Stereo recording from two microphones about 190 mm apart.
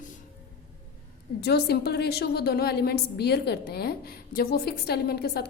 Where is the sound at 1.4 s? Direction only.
60° left (ahead or behind).